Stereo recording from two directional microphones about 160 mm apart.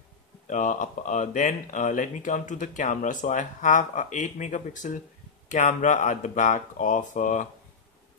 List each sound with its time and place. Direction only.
0.5 s speech: 50° left (ahead or behind)